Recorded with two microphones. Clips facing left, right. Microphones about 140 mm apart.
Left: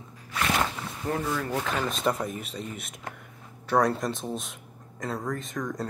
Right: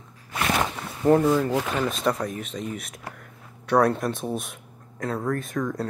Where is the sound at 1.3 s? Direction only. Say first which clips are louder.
Right 7 dB; 25° right (ahead or behind).